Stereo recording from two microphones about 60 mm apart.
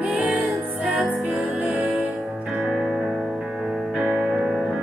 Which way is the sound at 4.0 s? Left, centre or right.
Right.